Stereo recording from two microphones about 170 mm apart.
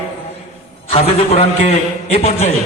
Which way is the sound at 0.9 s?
40° left (ahead or behind).